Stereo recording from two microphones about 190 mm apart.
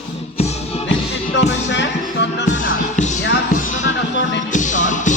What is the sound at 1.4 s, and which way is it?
Music, 70° left (ahead or behind).